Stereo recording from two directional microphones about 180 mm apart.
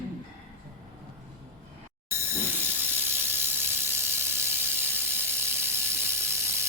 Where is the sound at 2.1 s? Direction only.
10° right (ahead or behind).